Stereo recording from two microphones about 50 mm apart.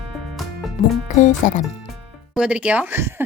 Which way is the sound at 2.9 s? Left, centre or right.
Right.